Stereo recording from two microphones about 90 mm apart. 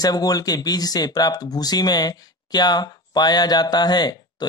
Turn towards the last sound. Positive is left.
turn(degrees=50)  # may be behind; listen again after turning